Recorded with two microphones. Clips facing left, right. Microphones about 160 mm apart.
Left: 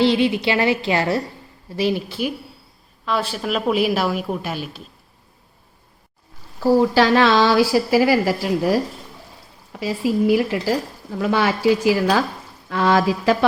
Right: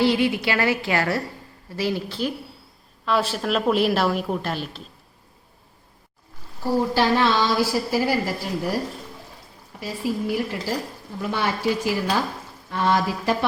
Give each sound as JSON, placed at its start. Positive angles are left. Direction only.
{"t": 0.0, "sound": "a woman's voice", "side_deg": 20}
{"t": 3.1, "sound": "a woman's voice", "side_deg": 0}
{"t": 6.6, "sound": "a woman's voice", "side_deg": 90}
{"t": 9.8, "sound": "a woman's voice", "side_deg": 90}